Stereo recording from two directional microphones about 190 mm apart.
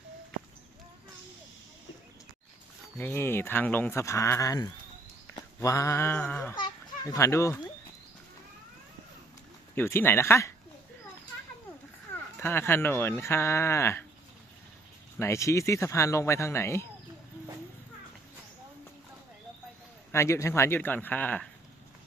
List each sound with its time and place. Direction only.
3.0 s speech: 10° left (ahead or behind)
6.6 s children playing: 20° left (ahead or behind)
9.7 s speech: 10° left (ahead or behind)
12.4 s speech: 10° left (ahead or behind)
15.2 s speech: 15° left (ahead or behind)
20.1 s speech: 15° left (ahead or behind)